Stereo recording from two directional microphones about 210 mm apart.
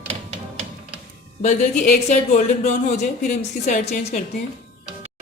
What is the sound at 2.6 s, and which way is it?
A woman's voice, 35° left (ahead or behind).